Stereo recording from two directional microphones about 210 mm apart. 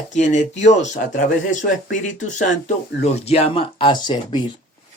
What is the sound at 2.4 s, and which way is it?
Speech, 35° left (ahead or behind).